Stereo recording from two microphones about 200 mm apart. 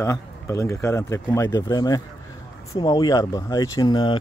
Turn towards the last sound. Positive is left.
turn(degrees=20)  # may be behind; listen again after turning